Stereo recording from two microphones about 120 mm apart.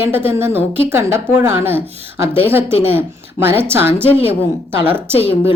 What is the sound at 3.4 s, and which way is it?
Speech, 20° right (ahead or behind).